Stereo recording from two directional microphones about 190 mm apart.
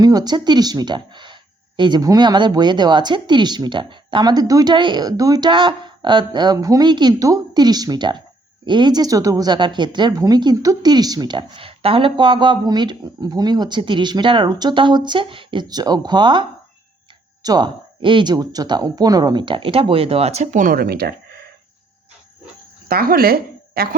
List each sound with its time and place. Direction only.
0.0 s speech: 20° right (ahead or behind); by 21.1 s 55° right (ahead or behind)
22.9 s a woman's voice: 50° right (ahead or behind)